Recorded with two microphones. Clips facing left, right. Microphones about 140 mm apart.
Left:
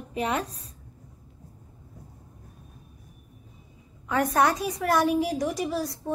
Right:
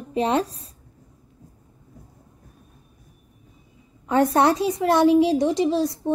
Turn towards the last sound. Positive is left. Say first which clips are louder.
# right 8 dB
turn(degrees=-25)  # may be behind; listen again after turning